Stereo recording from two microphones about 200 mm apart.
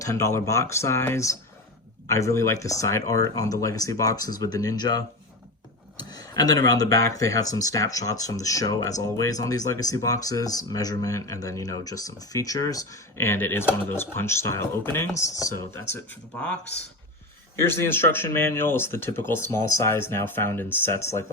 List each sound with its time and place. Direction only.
0.0 s speech: 15° left (ahead or behind)
6.0 s a sound: 20° left (ahead or behind)
6.7 s speech: 15° left (ahead or behind)
17.6 s speech: 10° left (ahead or behind)